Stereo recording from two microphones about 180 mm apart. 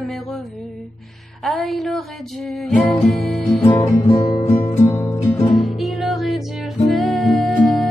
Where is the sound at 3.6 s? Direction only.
20° left (ahead or behind).